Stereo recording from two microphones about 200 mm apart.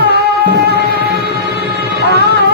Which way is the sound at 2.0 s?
55° right (ahead or behind).